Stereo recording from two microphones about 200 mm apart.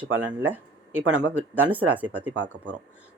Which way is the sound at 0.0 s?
10° right (ahead or behind).